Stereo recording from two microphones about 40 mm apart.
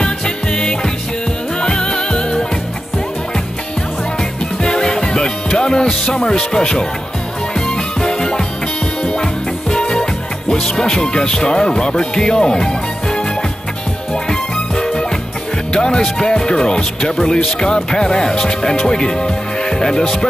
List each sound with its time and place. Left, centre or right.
0.0 s music: left
4.2 s music: centre
5.9 s speech: centre
7.5 s music: centre
10.5 s speech: centre
14.3 s music: centre
16.0 s speech: centre